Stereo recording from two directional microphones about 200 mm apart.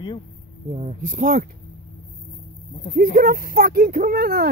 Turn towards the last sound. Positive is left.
turn(degrees=-50)  # may be behind; listen again after turning